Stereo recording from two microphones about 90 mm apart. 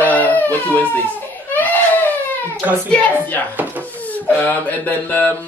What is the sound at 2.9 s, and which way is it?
Speech, 15° left (ahead or behind).